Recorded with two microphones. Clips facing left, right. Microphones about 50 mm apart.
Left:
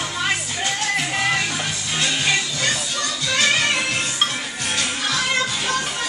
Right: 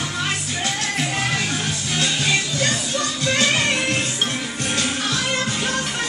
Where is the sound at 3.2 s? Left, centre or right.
Right.